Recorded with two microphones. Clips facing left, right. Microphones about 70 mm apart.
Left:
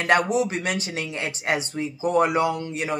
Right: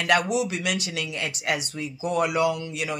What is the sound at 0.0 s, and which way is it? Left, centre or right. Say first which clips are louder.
Speech: left 2 dB; left.